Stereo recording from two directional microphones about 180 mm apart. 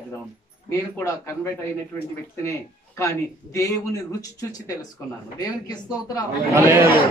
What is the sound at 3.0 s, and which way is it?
Speech, 15° left (ahead or behind).